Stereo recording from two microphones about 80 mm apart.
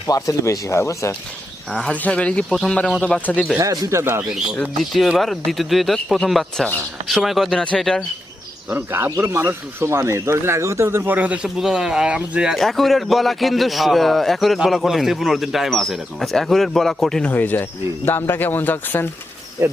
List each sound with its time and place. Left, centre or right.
0.1 s speech: left
1.7 s speech: centre
3.6 s speech: right
4.6 s speech: centre
8.7 s speech: right
11.4 s speech: centre
17.2 s speech: left
19.6 s speech: right